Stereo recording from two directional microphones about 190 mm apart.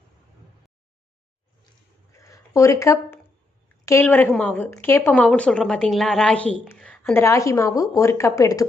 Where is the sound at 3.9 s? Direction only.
10° left (ahead or behind).